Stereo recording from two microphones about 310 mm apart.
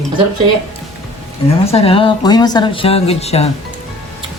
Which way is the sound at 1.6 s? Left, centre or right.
Centre.